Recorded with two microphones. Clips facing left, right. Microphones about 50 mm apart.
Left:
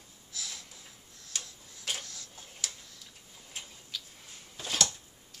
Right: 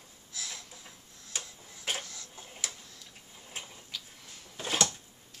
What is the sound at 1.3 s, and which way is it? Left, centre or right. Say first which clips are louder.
Tick-tock: right 1 dB; centre.